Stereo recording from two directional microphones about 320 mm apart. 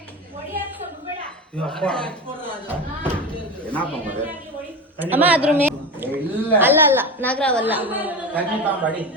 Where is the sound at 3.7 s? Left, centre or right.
Centre.